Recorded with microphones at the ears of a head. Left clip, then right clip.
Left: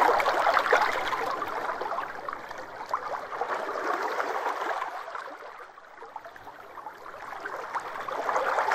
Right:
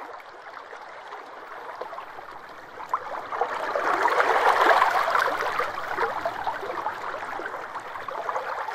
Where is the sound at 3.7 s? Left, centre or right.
Right.